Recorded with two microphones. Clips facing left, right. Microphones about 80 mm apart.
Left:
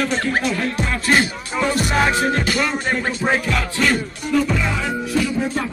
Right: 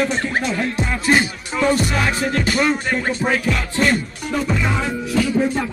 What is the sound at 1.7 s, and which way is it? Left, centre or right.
Music, left.